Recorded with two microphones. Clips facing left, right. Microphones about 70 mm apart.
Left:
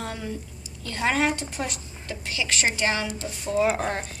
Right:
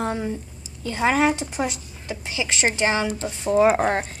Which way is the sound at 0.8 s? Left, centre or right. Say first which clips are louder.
Right 4 dB; centre.